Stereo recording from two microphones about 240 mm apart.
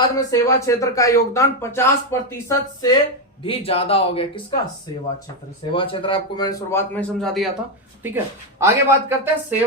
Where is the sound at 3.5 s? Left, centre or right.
Left.